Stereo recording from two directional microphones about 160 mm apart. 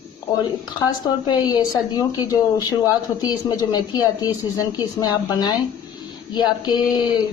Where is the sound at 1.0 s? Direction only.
25° left (ahead or behind).